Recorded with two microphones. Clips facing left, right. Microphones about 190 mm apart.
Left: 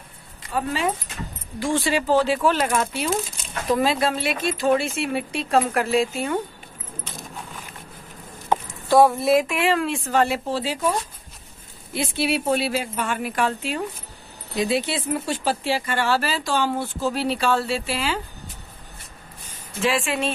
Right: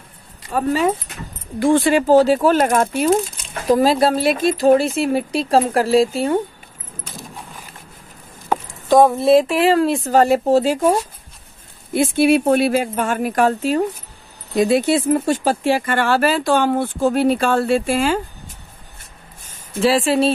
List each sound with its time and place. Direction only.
0.5 s speech: 45° right (ahead or behind)
1.6 s speech: 55° right (ahead or behind); by 6.4 s 30° right (ahead or behind)
8.8 s keys jangling: 20° right (ahead or behind)
9.2 s speech: 30° right (ahead or behind); by 18.2 s 50° right (ahead or behind)
19.4 s speech: 45° right (ahead or behind)